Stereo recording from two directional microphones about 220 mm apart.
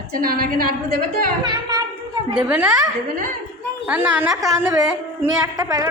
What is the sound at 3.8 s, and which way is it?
A woman's voice, 5° right (ahead or behind).